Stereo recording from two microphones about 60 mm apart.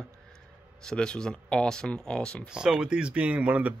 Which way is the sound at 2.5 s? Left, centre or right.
Centre.